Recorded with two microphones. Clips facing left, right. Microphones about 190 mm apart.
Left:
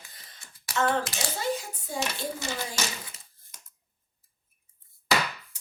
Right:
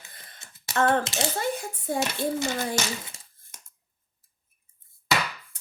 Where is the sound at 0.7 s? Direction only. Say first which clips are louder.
Right 3 dB; 25° right (ahead or behind).